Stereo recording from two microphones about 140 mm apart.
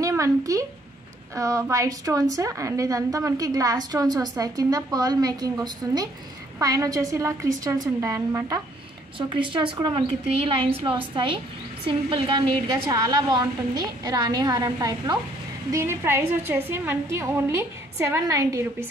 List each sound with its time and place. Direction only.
0.0 s a woman's voice: 20° right (ahead or behind)
9.3 s speech: 35° right (ahead or behind)
11.8 s speech: 40° right (ahead or behind)
12.8 s a woman's voice: 25° right (ahead or behind)